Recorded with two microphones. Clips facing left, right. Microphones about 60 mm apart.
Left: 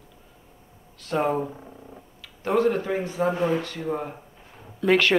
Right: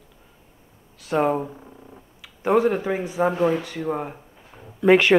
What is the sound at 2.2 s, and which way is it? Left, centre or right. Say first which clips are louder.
Speech: right 3 dB; centre.